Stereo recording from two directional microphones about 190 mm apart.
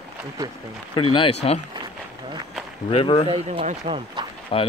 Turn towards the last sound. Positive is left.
turn(degrees=25)  # may be behind; listen again after turning